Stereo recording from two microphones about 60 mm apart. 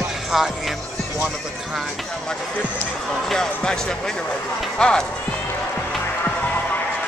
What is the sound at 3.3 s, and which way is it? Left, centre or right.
Speech, centre.